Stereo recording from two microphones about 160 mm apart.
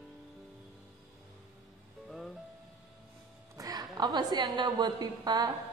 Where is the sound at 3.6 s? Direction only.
25° right (ahead or behind).